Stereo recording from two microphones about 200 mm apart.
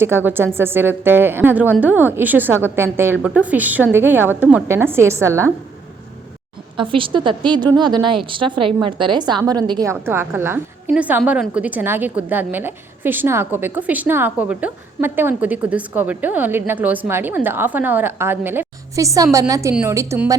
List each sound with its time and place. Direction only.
0.0 s a woman's voice: 10° right (ahead or behind)
6.7 s a woman's voice: 25° right (ahead or behind)